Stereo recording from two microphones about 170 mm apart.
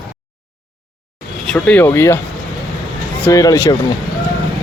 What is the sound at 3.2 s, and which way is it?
Speech, 20° left (ahead or behind).